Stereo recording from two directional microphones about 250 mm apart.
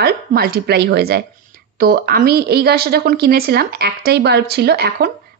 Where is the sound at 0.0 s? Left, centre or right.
Right.